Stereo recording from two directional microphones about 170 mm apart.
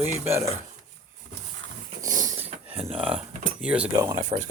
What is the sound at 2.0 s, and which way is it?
Dog, 20° right (ahead or behind).